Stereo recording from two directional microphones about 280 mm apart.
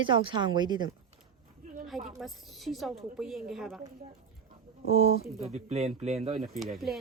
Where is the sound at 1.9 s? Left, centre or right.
Centre.